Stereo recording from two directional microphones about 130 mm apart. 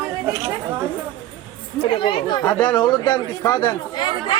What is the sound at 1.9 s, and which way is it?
Speech, 35° left (ahead or behind).